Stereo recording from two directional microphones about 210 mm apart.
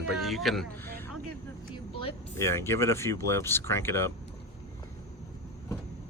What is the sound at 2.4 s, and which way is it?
Speech, 10° left (ahead or behind).